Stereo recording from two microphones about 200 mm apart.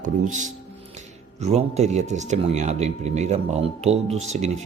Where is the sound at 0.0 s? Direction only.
40° right (ahead or behind).